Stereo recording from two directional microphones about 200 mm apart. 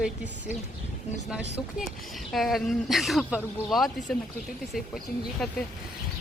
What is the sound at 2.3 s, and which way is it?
Speech, centre (ahead or behind).